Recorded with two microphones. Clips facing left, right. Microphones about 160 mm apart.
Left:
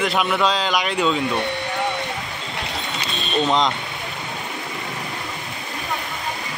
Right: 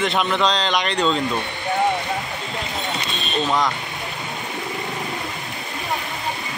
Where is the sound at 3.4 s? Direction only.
20° left (ahead or behind).